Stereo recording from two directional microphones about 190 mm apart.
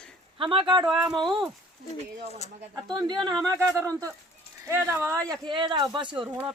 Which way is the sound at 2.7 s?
20° right (ahead or behind).